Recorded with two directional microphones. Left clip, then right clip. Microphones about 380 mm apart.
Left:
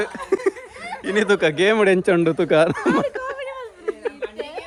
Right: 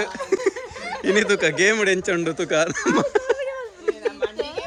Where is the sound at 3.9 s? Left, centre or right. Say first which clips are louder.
Right 3 dB; centre.